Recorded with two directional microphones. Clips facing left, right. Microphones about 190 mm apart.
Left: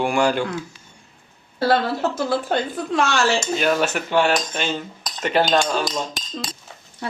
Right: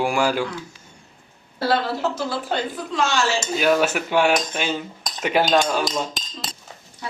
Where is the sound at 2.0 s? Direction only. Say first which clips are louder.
Left 3 dB; 50° left (ahead or behind).